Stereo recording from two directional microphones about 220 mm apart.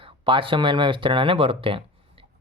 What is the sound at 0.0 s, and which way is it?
Speech, 25° right (ahead or behind).